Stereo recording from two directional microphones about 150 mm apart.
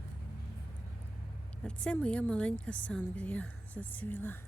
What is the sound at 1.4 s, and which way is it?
Speech, 5° left (ahead or behind).